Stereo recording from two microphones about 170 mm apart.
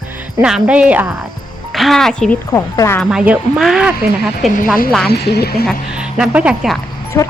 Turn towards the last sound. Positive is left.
turn(degrees=20)  # may be behind; listen again after turning